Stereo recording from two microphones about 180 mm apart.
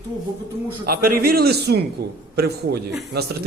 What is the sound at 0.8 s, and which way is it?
A man's voice, 55° right (ahead or behind).